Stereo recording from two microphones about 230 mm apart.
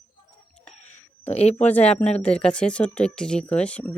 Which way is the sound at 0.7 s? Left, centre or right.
Left.